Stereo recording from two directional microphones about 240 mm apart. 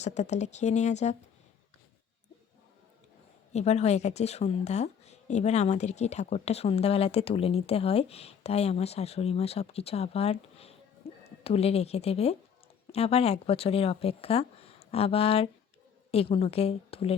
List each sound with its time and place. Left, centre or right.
0.0 s speech: left
3.5 s speech: left
11.1 s a sound: left
11.4 s speech: left